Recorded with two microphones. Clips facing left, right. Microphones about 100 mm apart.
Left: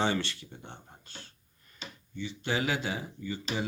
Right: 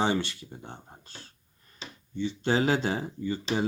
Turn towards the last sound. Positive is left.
turn(degrees=-35)  # may be behind; listen again after turning